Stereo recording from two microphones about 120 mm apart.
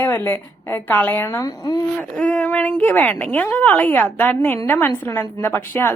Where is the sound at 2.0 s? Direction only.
10° left (ahead or behind).